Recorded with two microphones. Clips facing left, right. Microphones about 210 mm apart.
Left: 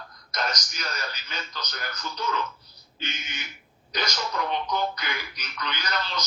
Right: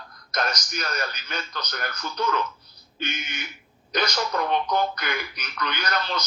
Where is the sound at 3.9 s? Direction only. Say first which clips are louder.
Right 5 dB; 55° right (ahead or behind).